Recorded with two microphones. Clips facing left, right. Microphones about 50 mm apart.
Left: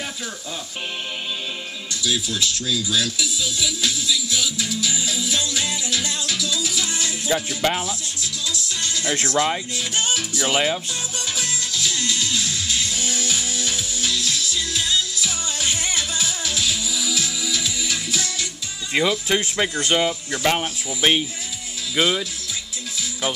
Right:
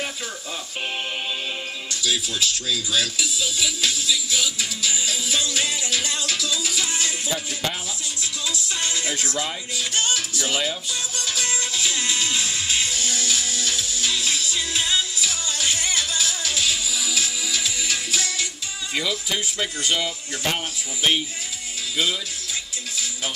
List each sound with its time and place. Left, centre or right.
2.0 s music: centre
7.2 s speech: left
8.2 s music: right
9.0 s speech: left
9.8 s music: centre
11.4 s music: centre
12.9 s music: centre
14.1 s music: right
15.2 s music: centre
16.5 s music: centre
18.9 s speech: left
21.9 s speech: left